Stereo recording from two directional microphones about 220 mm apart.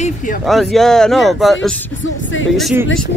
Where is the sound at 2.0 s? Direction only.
60° left (ahead or behind).